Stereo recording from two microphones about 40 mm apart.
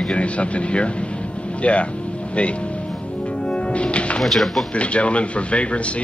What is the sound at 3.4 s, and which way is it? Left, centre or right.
Music, left.